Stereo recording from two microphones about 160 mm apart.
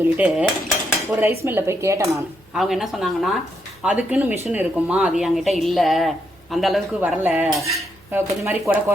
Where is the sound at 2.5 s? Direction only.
Centre (ahead or behind).